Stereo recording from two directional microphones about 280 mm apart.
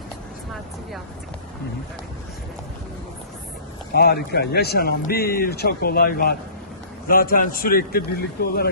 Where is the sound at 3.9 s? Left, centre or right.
Left.